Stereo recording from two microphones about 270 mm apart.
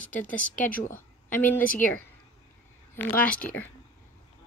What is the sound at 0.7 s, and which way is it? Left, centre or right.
Speech, left.